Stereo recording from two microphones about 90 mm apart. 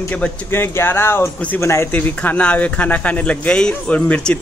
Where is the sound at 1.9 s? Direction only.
20° left (ahead or behind).